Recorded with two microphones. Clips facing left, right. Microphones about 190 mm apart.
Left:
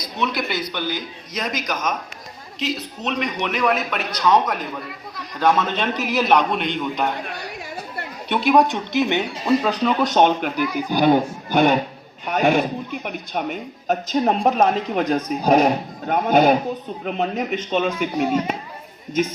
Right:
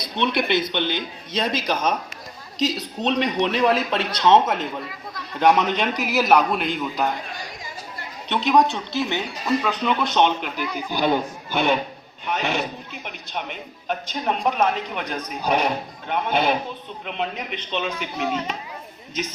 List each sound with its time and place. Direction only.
0.0 s a man's voice: 30° right (ahead or behind); by 7.1 s 5° right (ahead or behind)
7.3 s chatter: 65° left (ahead or behind)
8.3 s speech: 10° left (ahead or behind)
9.6 s a man's voice: 40° left (ahead or behind)
18.2 s speech: 10° left (ahead or behind)